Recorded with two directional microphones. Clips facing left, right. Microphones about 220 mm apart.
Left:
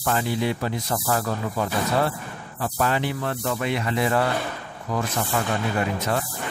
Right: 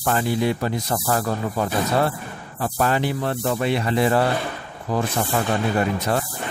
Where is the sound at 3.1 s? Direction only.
30° right (ahead or behind).